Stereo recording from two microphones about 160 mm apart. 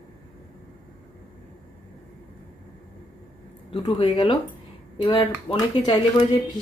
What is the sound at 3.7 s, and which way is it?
Speech, 30° left (ahead or behind).